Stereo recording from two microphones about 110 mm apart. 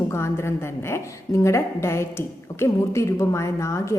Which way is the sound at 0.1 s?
25° left (ahead or behind).